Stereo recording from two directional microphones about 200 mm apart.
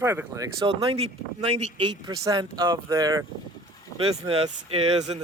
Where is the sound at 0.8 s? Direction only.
30° right (ahead or behind).